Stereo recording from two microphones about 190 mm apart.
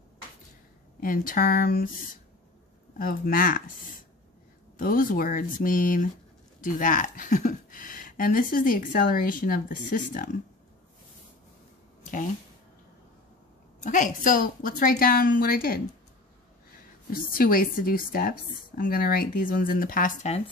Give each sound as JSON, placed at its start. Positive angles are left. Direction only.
{"t": 1.0, "sound": "speech", "side_deg": 45}
{"t": 3.0, "sound": "speech", "side_deg": 45}
{"t": 4.7, "sound": "speech", "side_deg": 45}
{"t": 12.0, "sound": "a sound", "side_deg": 45}
{"t": 13.8, "sound": "speech", "side_deg": 45}
{"t": 17.3, "sound": "speech", "side_deg": 50}